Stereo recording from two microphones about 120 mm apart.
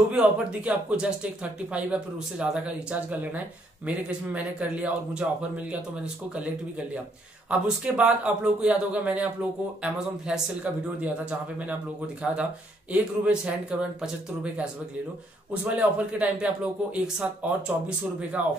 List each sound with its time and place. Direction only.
0.1 s speech: 10° right (ahead or behind)
7.4 s speech: 10° right (ahead or behind)